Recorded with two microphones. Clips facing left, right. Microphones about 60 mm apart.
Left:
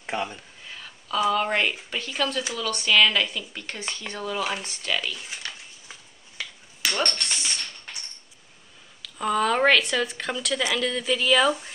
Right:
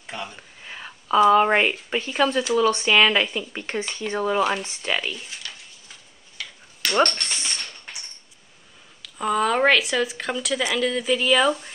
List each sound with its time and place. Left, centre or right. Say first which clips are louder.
0.0 s speech: left 5 dB; left
0.7 s a woman's voice: right 8 dB; right
6.8 s dog: right 4 dB; centre
7.3 s a sound: even; right
7.6 s a sound: right 1 dB; centre
9.0 s speech: right 1 dB; centre